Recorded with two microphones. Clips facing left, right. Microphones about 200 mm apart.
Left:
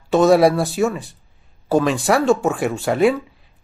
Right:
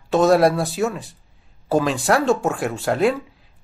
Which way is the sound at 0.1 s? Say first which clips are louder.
Left 2 dB; centre (ahead or behind).